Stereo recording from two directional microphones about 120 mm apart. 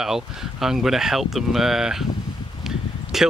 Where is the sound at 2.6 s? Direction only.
5° right (ahead or behind).